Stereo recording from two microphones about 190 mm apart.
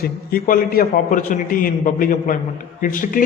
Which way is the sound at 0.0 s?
50° left (ahead or behind).